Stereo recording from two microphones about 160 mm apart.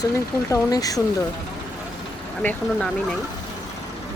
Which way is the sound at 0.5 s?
20° left (ahead or behind).